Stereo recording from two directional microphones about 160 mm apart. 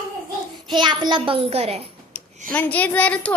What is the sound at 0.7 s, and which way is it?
A child's voice, 30° right (ahead or behind).